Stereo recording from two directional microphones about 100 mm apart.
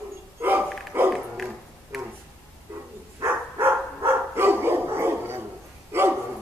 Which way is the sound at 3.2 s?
25° right (ahead or behind).